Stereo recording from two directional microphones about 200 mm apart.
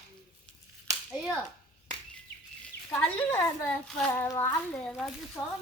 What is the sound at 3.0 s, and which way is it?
A woman's voice, 10° left (ahead or behind).